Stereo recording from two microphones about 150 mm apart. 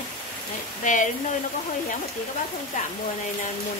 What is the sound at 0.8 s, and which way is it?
Speech, 55° left (ahead or behind).